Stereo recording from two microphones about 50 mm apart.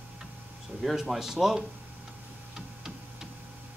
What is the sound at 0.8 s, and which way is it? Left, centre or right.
Speech, centre.